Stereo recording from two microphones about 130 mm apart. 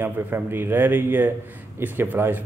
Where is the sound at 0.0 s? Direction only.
15° right (ahead or behind).